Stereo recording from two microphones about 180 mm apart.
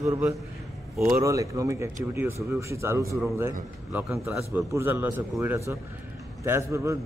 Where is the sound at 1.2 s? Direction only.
20° right (ahead or behind).